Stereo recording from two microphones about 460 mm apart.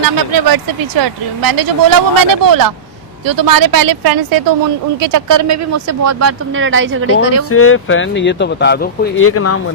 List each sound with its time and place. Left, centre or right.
0.0 s speech: right
7.5 s speech: left